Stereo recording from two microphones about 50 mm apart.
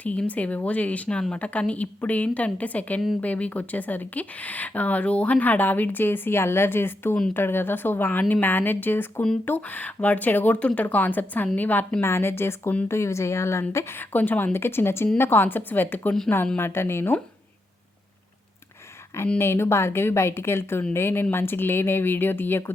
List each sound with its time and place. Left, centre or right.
0.0 s a woman's voice: left
12.0 s a woman's voice: left
12.9 s a woman's voice: left
13.9 s speech: left
16.6 s speech: left
19.4 s a woman's voice: left